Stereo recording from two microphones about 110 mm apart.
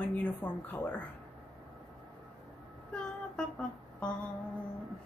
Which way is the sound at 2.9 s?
5° left (ahead or behind).